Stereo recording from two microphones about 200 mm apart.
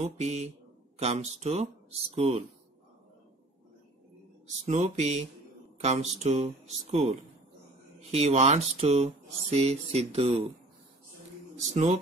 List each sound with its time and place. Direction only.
0.0 s speech: 35° right (ahead or behind)
4.6 s speech: 35° right (ahead or behind)
11.5 s a man's voice: 35° right (ahead or behind)